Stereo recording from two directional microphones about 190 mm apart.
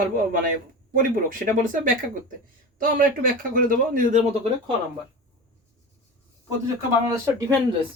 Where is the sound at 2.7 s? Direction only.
50° right (ahead or behind).